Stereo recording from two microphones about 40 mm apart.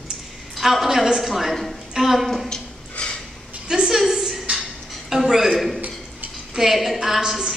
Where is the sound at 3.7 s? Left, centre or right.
Centre.